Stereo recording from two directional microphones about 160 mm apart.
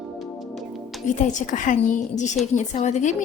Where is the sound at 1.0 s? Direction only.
50° left (ahead or behind).